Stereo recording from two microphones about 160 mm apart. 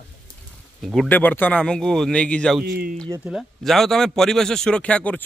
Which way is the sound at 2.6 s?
70° right (ahead or behind).